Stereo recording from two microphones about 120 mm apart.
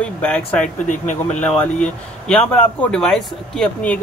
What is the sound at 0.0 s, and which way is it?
Speech, 10° left (ahead or behind).